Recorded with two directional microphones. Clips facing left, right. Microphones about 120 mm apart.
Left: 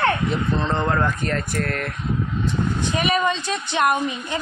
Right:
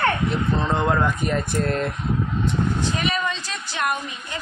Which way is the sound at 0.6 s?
10° right (ahead or behind).